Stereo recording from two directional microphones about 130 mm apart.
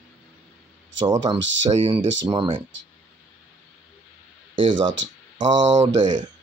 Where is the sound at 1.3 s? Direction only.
55° right (ahead or behind).